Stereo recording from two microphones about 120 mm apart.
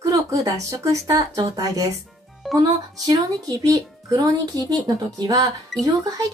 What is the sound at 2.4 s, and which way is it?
Music, centre (ahead or behind).